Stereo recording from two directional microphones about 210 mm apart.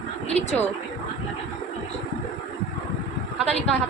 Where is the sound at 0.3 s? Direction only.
30° left (ahead or behind).